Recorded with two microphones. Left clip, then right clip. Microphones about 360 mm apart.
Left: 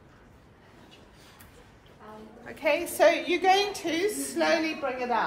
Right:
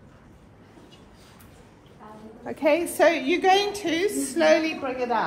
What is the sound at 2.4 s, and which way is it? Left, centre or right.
A woman's voice, centre.